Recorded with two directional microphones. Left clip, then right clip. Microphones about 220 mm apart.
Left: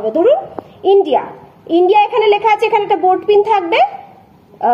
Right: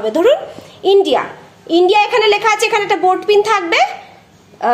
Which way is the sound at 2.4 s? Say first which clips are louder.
Left 1 dB; 5° left (ahead or behind).